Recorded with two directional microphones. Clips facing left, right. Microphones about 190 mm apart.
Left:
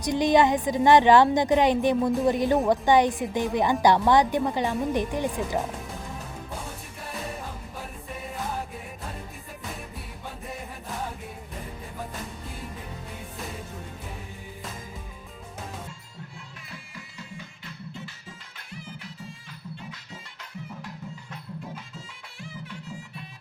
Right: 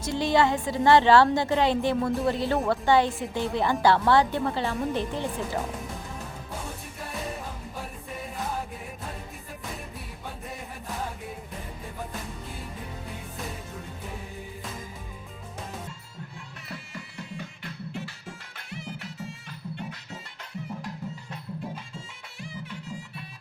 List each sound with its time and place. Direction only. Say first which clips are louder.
0.0 s a woman's voice: left 3 dB; 15° left (ahead or behind)